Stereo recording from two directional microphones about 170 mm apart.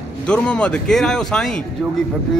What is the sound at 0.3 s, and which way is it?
A man's voice, 5° left (ahead or behind).